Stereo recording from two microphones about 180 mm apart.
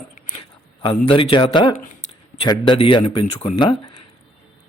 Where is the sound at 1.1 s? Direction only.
30° left (ahead or behind).